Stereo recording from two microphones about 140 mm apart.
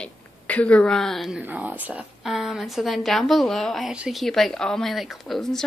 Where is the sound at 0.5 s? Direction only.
10° left (ahead or behind).